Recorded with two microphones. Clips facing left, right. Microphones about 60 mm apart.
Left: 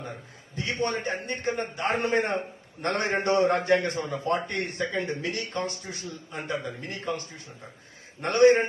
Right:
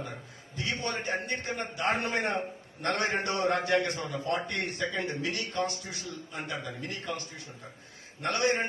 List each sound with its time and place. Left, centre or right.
0.5 s a man's voice: left